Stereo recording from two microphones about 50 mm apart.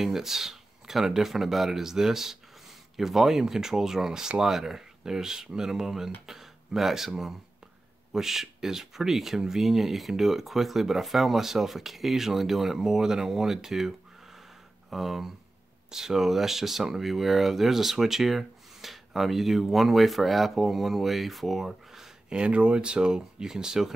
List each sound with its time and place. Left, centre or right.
0.0 s speech: centre
22.4 s speech: right